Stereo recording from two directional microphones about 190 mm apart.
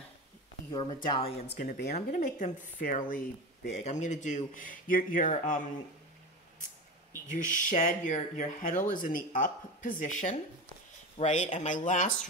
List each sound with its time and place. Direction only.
0.7 s speech: 20° left (ahead or behind)
1.6 s speech: 45° left (ahead or behind)
7.3 s speech: 45° left (ahead or behind)